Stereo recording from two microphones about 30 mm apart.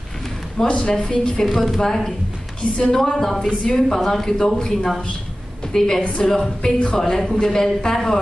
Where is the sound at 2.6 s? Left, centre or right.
Left.